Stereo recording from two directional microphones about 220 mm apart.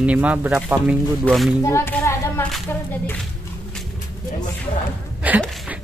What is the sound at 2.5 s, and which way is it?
Speech, 5° left (ahead or behind).